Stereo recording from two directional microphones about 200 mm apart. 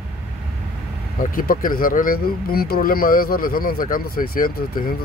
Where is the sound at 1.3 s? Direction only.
45° left (ahead or behind).